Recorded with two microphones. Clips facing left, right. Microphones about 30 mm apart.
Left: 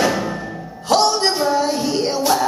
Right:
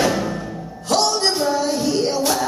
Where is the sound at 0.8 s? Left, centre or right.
Centre.